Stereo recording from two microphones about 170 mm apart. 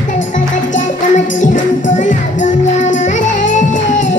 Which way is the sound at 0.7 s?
45° left (ahead or behind).